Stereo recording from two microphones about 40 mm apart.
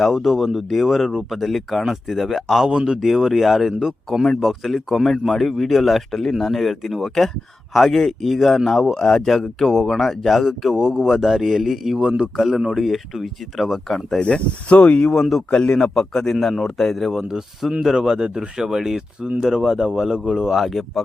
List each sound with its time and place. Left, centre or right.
0.1 s a man's voice: centre
2.6 s a man's voice: right
3.0 s a man's voice: centre
4.4 s a man's voice: centre
11.9 s a man's voice: right
12.8 s a man's voice: centre
14.2 s speech: left
15.0 s a man's voice: centre
15.4 s a man's voice: left; by 17.2 s centre
17.2 s speech: centre
20.5 s a man's voice: centre